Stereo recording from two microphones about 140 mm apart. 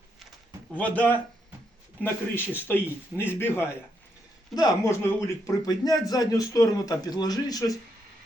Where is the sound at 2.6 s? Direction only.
15° left (ahead or behind).